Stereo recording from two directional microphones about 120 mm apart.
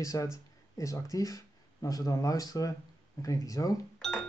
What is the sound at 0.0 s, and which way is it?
Speech, 25° left (ahead or behind).